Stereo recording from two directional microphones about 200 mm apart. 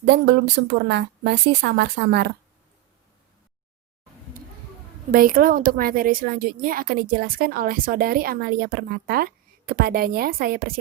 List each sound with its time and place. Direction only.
0.0 s a woman's voice: 60° right (ahead or behind)
5.1 s a woman's voice: 45° right (ahead or behind)